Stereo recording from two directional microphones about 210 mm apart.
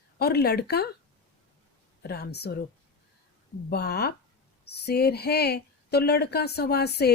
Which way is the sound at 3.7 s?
50° left (ahead or behind).